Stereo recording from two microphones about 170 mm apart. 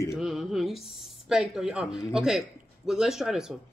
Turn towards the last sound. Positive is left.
turn(degrees=0)  # may be behind; listen again after turning